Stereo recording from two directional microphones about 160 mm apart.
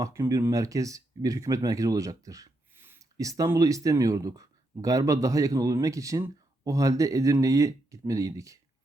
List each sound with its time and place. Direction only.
0.0 s speech: 20° right (ahead or behind)